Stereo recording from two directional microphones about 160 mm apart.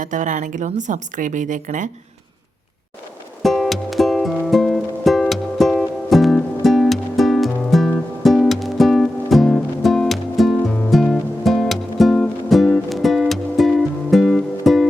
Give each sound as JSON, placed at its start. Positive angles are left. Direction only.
{"t": 0.0, "sound": "speech", "side_deg": -50}
{"t": 3.4, "sound": "music", "side_deg": 0}